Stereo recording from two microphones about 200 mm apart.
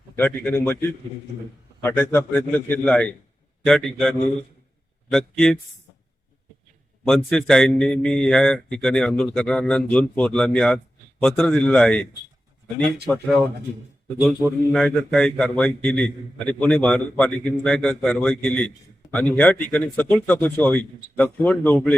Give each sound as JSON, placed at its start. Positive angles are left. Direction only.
{"t": 0.2, "sound": "speech", "side_deg": 10}
{"t": 1.8, "sound": "a man's voice", "side_deg": 10}
{"t": 5.1, "sound": "a man's voice", "side_deg": 5}
{"t": 7.1, "sound": "a man's voice", "side_deg": 0}